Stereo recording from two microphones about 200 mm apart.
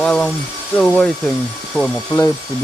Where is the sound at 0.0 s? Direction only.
5° left (ahead or behind).